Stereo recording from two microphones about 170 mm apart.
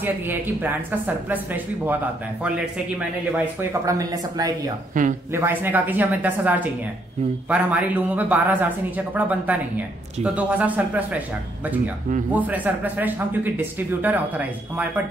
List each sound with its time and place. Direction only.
0.0 s a man's voice: 10° right (ahead or behind)
3.3 s speech: 20° right (ahead or behind)
4.9 s speech: 50° right (ahead or behind)
5.3 s a man's voice: 15° right (ahead or behind)
12.3 s a man's voice: 10° right (ahead or behind)